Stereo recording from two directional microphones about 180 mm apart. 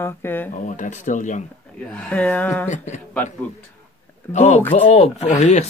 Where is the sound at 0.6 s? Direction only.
45° left (ahead or behind).